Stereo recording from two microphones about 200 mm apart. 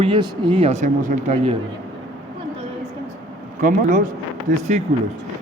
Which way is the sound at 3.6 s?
40° right (ahead or behind).